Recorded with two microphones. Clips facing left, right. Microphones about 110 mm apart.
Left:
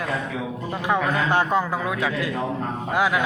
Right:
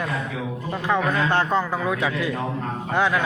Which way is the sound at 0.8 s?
15° left (ahead or behind).